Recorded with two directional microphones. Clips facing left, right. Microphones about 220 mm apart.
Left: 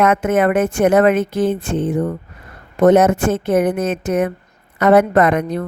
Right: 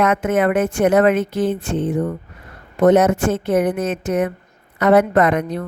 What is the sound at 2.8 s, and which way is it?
A woman's voice, 45° left (ahead or behind).